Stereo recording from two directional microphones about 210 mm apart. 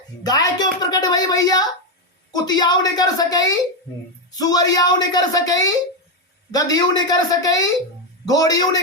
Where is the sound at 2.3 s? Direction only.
20° left (ahead or behind).